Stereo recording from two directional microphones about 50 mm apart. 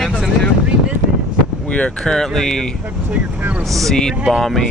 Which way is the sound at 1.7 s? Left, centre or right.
Left.